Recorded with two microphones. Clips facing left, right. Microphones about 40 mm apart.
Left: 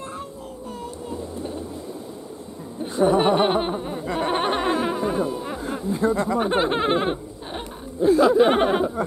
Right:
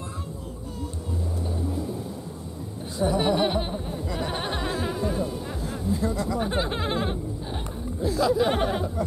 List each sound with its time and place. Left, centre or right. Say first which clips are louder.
2.8 s speech: left 6 dB; left
4.0 s speech: left 8 dB; left
6.4 s a sound: left 6 dB; left